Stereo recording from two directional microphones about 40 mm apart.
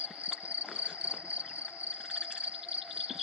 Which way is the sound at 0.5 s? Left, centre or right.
Right.